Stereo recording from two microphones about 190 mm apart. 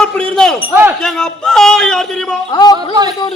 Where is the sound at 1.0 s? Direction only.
5° left (ahead or behind).